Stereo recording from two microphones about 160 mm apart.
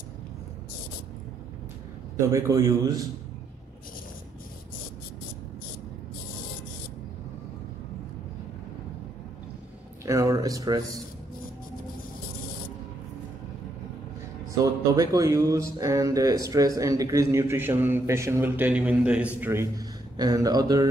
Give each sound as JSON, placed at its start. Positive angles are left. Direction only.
{"t": 2.1, "sound": "speech", "side_deg": -20}
{"t": 10.0, "sound": "a sound", "side_deg": -20}
{"t": 14.6, "sound": "speech", "side_deg": -20}